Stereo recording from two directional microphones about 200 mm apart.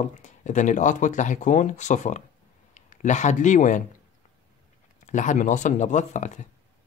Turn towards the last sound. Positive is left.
turn(degrees=35)  # may be behind; listen again after turning